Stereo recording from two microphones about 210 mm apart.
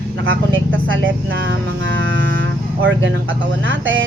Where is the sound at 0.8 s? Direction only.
60° right (ahead or behind).